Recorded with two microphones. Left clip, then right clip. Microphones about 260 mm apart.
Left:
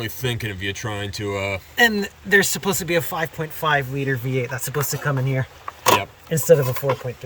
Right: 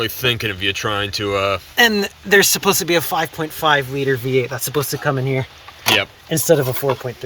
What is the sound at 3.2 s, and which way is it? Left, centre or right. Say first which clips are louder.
Speech: right 5 dB; right.